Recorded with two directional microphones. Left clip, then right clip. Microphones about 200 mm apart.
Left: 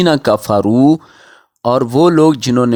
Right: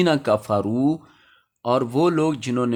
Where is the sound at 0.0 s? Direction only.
50° left (ahead or behind).